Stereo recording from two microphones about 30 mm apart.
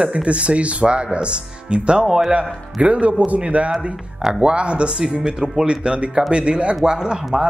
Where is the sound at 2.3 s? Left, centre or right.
Right.